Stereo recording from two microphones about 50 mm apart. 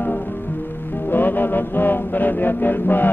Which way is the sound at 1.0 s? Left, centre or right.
Left.